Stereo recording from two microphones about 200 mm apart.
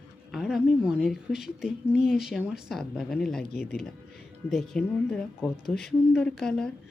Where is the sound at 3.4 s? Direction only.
50° left (ahead or behind).